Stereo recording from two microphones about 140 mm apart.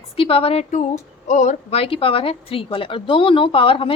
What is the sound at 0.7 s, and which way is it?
A woman's voice, 60° left (ahead or behind).